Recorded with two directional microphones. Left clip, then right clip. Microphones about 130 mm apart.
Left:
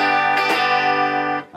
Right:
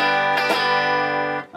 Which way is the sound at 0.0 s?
25° left (ahead or behind).